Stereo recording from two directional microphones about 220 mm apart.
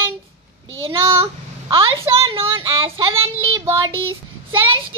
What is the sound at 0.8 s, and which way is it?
Speech, 25° right (ahead or behind).